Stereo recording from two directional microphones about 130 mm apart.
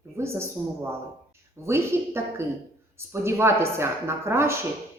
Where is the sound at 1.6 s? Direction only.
20° right (ahead or behind).